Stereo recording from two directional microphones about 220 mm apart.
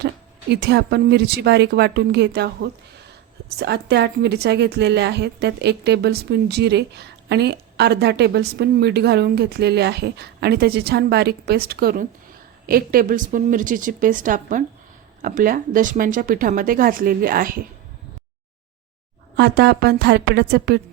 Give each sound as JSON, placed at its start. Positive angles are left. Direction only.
{"t": 0.5, "sound": "a woman's voice", "side_deg": -50}
{"t": 19.4, "sound": "a woman's voice", "side_deg": -45}